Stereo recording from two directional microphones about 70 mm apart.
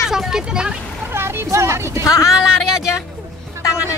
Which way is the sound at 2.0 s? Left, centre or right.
Left.